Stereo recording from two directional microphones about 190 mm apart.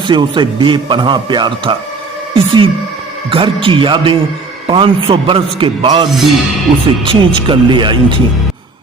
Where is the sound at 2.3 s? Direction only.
25° right (ahead or behind).